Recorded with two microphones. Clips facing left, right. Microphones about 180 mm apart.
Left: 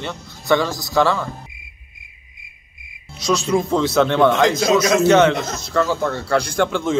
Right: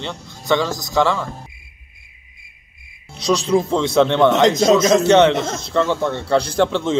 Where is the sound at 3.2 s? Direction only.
30° right (ahead or behind).